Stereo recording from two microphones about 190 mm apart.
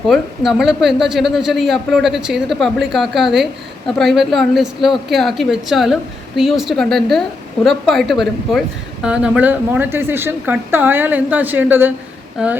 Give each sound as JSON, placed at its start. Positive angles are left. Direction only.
{"t": 0.1, "sound": "speech", "side_deg": 0}